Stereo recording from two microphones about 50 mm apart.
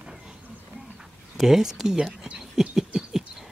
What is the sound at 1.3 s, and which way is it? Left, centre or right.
Speech, centre.